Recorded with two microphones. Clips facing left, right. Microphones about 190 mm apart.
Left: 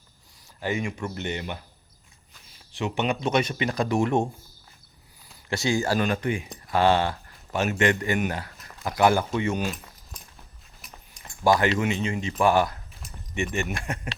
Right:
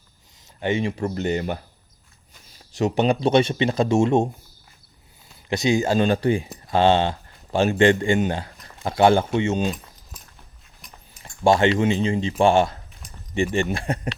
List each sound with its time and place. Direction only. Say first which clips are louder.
0.6 s speech: right 5 dB; 30° right (ahead or behind)
2.7 s speech: right 7 dB; 40° right (ahead or behind); by 4.3 s 25° right (ahead or behind)
5.5 s a man's voice: right 4 dB; 20° right (ahead or behind)
11.2 s a sound: right 4 dB; 25° right (ahead or behind)
11.8 s speech: right 6 dB; 30° right (ahead or behind)